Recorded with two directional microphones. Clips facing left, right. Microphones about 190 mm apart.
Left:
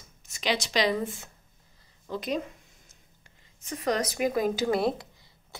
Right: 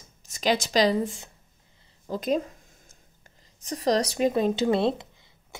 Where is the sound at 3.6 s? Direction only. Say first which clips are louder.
Right 4 dB; 35° right (ahead or behind).